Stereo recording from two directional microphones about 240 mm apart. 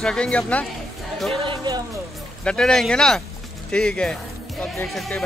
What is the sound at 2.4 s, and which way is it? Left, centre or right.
Speech, centre.